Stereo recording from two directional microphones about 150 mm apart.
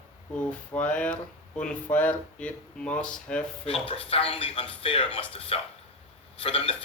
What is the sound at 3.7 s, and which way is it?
A man's voice, 40° left (ahead or behind).